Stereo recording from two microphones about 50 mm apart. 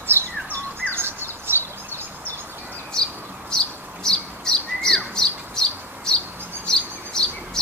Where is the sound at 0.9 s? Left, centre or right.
Right.